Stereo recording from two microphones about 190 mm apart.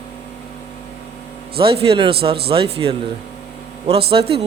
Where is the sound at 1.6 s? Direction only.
30° right (ahead or behind).